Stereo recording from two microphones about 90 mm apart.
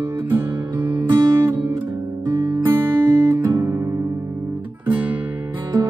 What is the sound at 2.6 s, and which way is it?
Music, 25° right (ahead or behind).